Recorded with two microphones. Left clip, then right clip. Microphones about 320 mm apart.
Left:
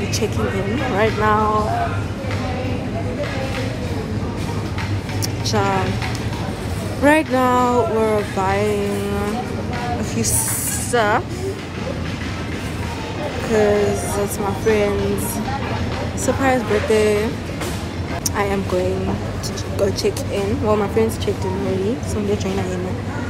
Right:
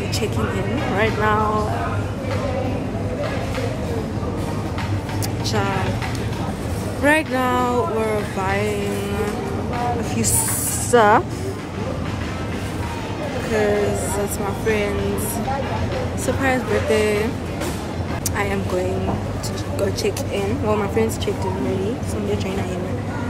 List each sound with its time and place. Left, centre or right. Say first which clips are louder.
0.9 s speech: left 2 dB; centre
5.5 s speech: left 4 dB; centre
7.0 s speech: left 3 dB; centre
10.9 s speech: right 4 dB; centre
13.5 s speech: left 3 dB; centre
16.4 s speech: left 2 dB; centre
19.8 s speech: left 3 dB; centre